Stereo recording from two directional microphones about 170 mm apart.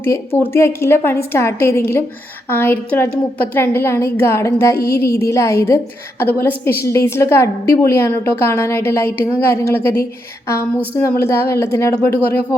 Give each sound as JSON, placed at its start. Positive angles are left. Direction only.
{"t": 0.0, "sound": "a woman's voice", "side_deg": 15}
{"t": 10.9, "sound": "a woman's voice", "side_deg": 15}